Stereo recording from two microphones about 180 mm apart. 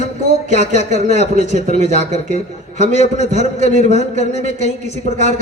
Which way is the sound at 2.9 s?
35° left (ahead or behind).